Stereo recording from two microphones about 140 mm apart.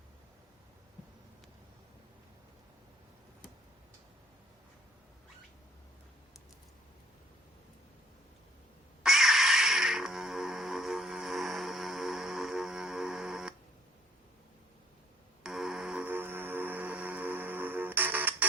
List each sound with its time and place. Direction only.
9.0 s music: centre (ahead or behind)
15.4 s music: 5° right (ahead or behind)